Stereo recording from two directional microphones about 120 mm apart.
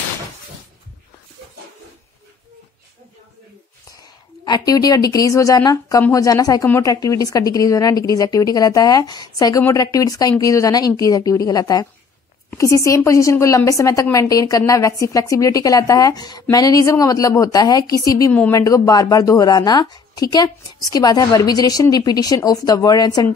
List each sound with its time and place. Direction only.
4.5 s a woman's voice: 30° left (ahead or behind)